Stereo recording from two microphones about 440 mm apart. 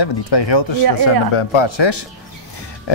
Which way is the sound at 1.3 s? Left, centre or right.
Left.